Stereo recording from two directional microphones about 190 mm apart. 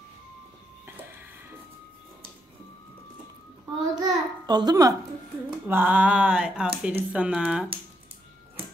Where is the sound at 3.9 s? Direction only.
20° right (ahead or behind).